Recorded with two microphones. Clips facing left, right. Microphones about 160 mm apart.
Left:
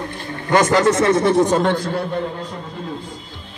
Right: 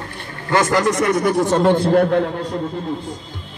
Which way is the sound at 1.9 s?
60° right (ahead or behind).